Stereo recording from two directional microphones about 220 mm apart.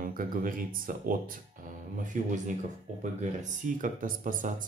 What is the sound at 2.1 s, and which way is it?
Speech, 35° right (ahead or behind).